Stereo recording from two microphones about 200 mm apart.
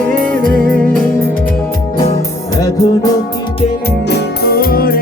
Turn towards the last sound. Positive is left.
turn(degrees=50)  # may be behind; listen again after turning